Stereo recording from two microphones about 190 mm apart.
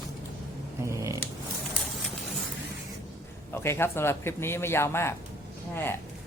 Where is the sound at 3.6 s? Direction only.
10° left (ahead or behind).